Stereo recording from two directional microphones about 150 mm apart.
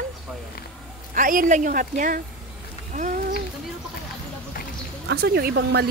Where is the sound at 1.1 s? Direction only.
65° right (ahead or behind).